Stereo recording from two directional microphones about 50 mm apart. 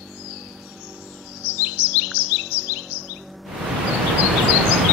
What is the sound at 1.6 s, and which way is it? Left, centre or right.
Chirp, right.